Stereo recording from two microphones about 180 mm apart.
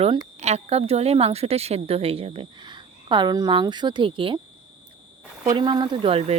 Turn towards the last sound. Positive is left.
turn(degrees=-35)  # may be behind; listen again after turning